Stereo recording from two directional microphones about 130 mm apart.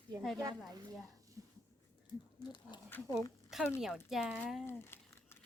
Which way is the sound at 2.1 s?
35° left (ahead or behind).